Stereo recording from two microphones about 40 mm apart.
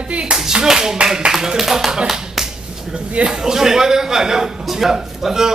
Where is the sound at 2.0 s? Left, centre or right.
Centre.